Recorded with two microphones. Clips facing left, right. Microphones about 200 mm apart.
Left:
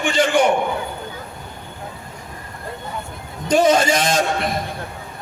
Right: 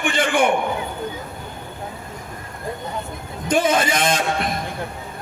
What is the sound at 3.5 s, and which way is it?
Speech, 55° right (ahead or behind).